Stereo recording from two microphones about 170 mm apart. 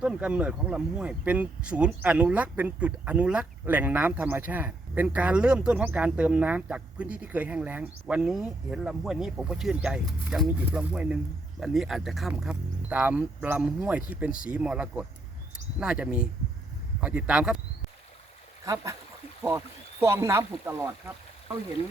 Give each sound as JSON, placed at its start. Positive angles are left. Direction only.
{"t": 0.0, "sound": "speech", "side_deg": -5}
{"t": 18.6, "sound": "speech", "side_deg": -20}